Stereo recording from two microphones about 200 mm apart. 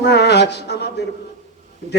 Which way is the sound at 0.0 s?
55° left (ahead or behind).